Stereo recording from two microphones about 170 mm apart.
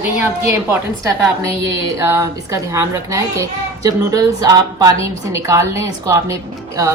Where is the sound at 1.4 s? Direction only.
15° right (ahead or behind).